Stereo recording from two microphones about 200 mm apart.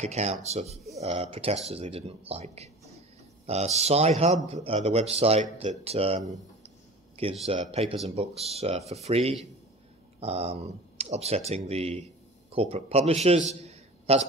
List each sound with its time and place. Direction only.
0.0 s speech: 35° right (ahead or behind)
7.4 s speech: 35° right (ahead or behind)
13.5 s a sound: 30° right (ahead or behind)